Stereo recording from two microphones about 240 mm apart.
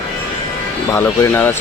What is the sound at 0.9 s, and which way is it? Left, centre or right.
Speech, centre.